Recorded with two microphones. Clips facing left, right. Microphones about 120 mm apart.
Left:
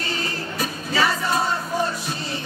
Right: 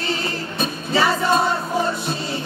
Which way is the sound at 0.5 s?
25° right (ahead or behind).